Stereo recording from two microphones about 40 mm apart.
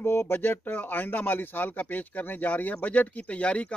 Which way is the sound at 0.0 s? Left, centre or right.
Left.